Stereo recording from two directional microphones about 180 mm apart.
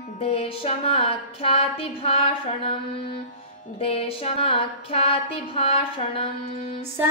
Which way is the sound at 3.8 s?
30° left (ahead or behind).